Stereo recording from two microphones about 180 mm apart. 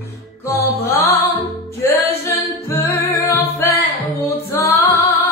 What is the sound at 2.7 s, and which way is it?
Music, 15° left (ahead or behind).